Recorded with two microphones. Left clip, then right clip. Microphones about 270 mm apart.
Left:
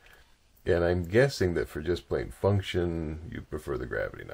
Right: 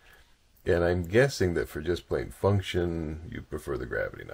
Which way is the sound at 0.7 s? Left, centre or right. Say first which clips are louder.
Right 1 dB; centre.